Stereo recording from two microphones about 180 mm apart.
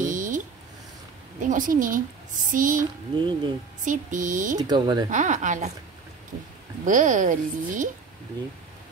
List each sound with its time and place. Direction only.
0.0 s a sound: 45° right (ahead or behind)
1.4 s a woman's voice: 45° right (ahead or behind)
3.2 s speech: 25° right (ahead or behind)
3.8 s a woman's voice: 45° right (ahead or behind)
4.6 s speech: 25° right (ahead or behind)
5.1 s a woman's voice: 45° right (ahead or behind)
6.8 s a woman's voice: 45° right (ahead or behind)